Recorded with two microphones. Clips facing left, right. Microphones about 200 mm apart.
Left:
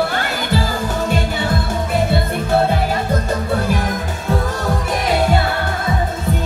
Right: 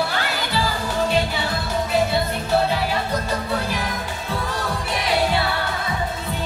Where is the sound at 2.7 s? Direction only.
50° left (ahead or behind).